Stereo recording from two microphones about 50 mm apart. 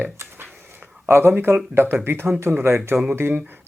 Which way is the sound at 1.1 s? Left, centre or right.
Right.